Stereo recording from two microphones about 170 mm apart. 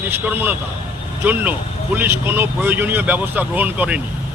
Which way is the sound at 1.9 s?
10° right (ahead or behind).